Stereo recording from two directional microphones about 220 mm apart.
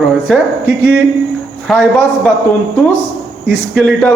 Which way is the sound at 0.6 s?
50° right (ahead or behind).